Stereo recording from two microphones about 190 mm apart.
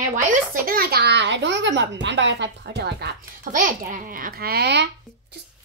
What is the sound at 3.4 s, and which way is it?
A child's voice, 45° right (ahead or behind).